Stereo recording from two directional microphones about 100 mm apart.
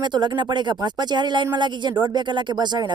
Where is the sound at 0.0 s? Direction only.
50° right (ahead or behind).